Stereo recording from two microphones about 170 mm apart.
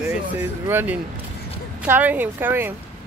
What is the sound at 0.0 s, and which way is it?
Speech, 10° right (ahead or behind).